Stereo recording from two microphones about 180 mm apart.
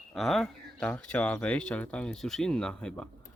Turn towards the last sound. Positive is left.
turn(degrees=5)  # may be behind; listen again after turning